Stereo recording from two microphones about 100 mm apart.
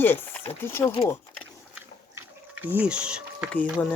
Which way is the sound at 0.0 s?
20° left (ahead or behind).